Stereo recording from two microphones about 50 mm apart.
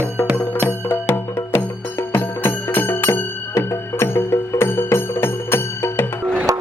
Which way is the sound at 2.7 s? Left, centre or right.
Left.